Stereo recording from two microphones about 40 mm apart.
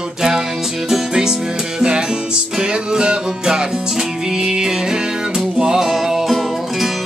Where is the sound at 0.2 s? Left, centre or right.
Centre.